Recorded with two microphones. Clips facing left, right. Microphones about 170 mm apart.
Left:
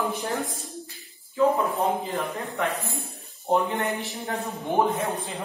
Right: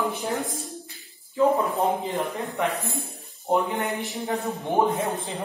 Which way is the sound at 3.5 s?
15° right (ahead or behind).